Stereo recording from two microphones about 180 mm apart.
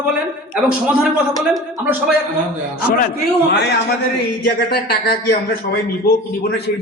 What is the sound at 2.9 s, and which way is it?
Speech, 55° left (ahead or behind).